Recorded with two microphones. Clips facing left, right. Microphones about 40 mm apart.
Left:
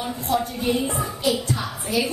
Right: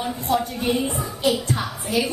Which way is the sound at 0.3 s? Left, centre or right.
Right.